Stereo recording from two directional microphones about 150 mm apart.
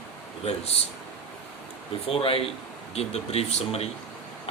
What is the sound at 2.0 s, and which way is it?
Speech, 40° left (ahead or behind).